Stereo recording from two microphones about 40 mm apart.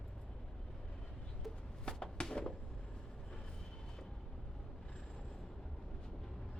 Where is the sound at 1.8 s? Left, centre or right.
Left.